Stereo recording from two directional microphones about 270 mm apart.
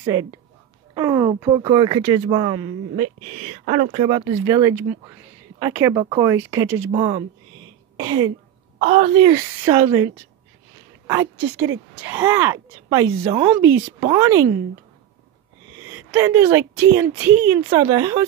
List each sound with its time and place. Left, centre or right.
0.9 s speech: centre
8.7 s speech: right
15.9 s speech: centre